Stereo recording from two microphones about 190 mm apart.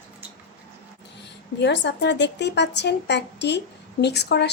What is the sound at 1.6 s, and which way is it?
Speech, 65° left (ahead or behind).